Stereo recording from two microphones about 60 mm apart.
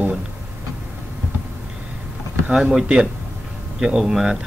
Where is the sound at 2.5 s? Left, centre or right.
Centre.